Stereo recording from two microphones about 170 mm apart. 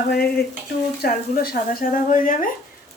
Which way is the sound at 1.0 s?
60° left (ahead or behind).